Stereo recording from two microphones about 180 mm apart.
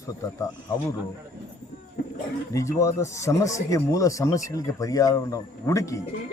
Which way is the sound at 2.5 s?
15° left (ahead or behind).